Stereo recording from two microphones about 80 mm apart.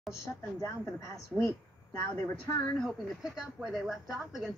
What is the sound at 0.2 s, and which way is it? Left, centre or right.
A woman's voice, left.